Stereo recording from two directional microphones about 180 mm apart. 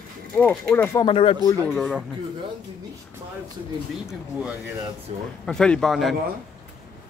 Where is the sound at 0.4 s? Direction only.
10° left (ahead or behind).